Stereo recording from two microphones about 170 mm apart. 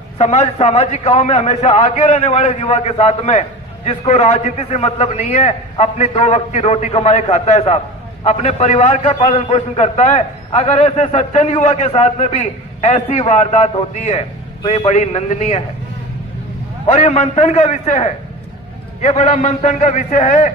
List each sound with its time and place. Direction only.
0.2 s a man's voice: 40° left (ahead or behind)
14.9 s a man's voice: 45° left (ahead or behind)
16.8 s a man's voice: 40° left (ahead or behind)